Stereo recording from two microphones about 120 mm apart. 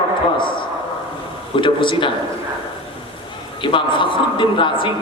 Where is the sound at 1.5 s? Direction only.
45° left (ahead or behind).